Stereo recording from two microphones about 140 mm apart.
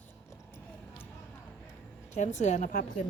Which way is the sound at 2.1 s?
60° left (ahead or behind).